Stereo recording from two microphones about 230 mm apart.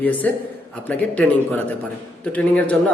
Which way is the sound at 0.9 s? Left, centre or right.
Centre.